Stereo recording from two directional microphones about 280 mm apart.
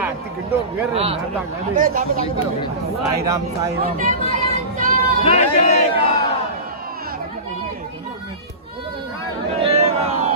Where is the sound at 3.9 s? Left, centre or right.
Right.